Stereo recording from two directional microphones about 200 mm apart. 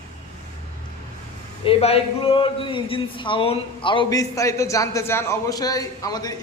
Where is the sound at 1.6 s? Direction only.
30° left (ahead or behind).